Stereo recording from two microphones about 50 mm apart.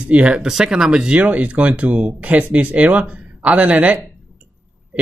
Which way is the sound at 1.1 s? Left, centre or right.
Right.